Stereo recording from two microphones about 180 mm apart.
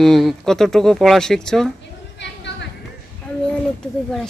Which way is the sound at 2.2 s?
75° left (ahead or behind).